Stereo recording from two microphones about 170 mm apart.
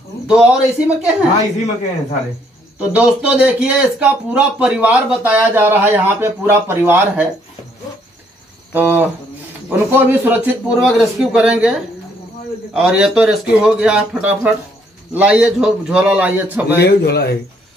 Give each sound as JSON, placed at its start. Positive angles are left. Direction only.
{"t": 0.3, "sound": "speech", "side_deg": -5}
{"t": 2.8, "sound": "speech", "side_deg": -10}
{"t": 8.7, "sound": "a man's voice", "side_deg": -10}
{"t": 16.6, "sound": "a man's voice", "side_deg": 75}